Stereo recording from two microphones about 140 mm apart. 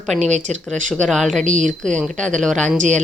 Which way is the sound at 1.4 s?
60° right (ahead or behind).